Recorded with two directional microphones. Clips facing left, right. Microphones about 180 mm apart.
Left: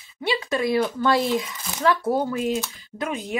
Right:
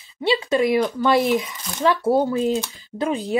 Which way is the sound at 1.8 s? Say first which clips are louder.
Right 3 dB; 25° right (ahead or behind).